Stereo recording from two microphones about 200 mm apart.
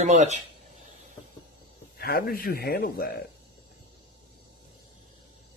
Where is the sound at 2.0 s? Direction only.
50° left (ahead or behind).